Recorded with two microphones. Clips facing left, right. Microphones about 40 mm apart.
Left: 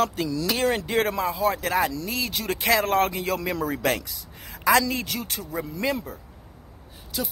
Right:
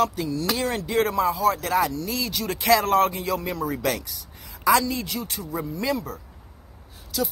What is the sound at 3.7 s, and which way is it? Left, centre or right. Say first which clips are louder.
A man's voice: left 1 dB; left.